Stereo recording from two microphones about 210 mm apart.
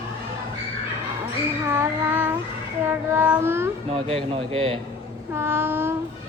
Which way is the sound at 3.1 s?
10° right (ahead or behind).